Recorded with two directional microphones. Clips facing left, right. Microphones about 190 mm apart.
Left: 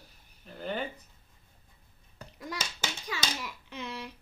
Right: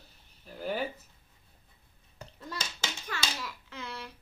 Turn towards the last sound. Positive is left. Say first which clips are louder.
# left 2 dB
turn(degrees=15)  # may be behind; listen again after turning